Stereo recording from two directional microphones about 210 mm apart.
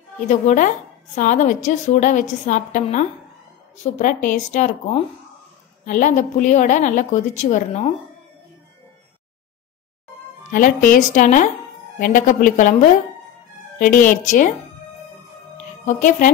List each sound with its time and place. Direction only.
0.3 s a woman's voice: 35° left (ahead or behind)
10.5 s a woman's voice: 40° left (ahead or behind)
13.7 s a woman's voice: 40° left (ahead or behind)
15.5 s music: 35° left (ahead or behind)